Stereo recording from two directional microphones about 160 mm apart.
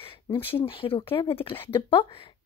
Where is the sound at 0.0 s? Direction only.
35° left (ahead or behind).